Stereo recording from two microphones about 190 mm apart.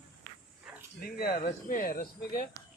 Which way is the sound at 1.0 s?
50° left (ahead or behind).